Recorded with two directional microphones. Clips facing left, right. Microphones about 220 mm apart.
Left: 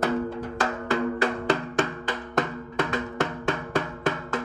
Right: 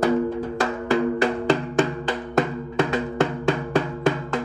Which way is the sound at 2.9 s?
30° right (ahead or behind).